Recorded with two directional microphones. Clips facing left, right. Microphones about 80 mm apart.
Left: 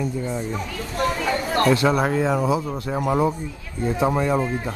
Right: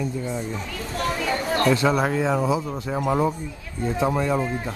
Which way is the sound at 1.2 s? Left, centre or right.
Left.